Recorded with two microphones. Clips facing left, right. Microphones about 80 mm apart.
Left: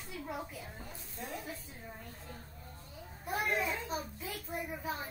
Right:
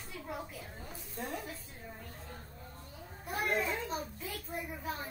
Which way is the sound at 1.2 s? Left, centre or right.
Right.